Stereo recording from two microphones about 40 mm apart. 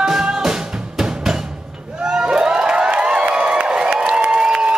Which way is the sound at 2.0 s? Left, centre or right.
Right.